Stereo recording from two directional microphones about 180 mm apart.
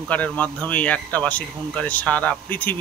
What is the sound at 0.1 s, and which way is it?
Speech, 10° left (ahead or behind).